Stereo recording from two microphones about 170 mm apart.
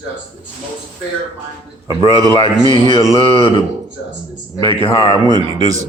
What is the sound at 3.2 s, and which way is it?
Speech, 35° left (ahead or behind).